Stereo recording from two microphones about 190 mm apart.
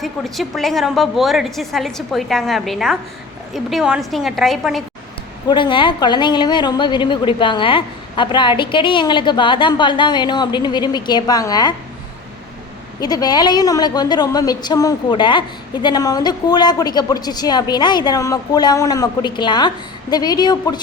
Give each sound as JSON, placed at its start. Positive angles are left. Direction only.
{"t": 0.0, "sound": "a woman's voice", "side_deg": 0}
{"t": 5.5, "sound": "a woman's voice", "side_deg": 25}
{"t": 13.0, "sound": "a woman's voice", "side_deg": 20}